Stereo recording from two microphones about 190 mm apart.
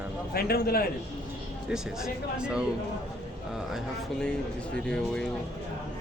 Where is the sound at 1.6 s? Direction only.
5° right (ahead or behind).